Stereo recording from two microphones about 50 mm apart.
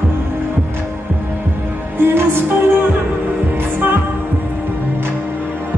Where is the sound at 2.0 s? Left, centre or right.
Right.